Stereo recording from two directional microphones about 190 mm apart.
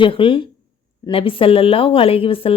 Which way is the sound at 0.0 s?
25° left (ahead or behind).